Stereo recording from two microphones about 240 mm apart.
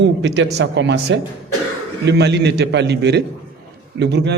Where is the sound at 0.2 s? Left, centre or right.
Right.